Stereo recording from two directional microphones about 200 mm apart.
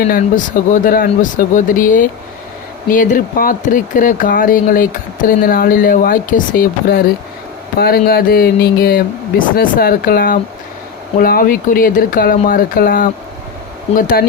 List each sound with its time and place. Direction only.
0.0 s speech: 45° left (ahead or behind)